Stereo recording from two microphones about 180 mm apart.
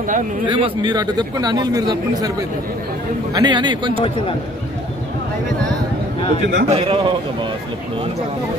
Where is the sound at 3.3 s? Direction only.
25° right (ahead or behind).